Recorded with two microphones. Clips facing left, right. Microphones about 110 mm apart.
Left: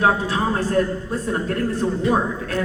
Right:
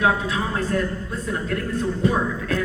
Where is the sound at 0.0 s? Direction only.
35° left (ahead or behind).